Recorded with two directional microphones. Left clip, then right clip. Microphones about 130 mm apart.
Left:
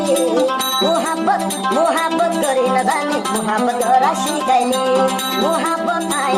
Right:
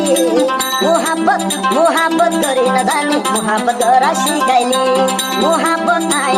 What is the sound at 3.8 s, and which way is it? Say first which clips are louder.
Speech: right 3 dB; 30° right (ahead or behind).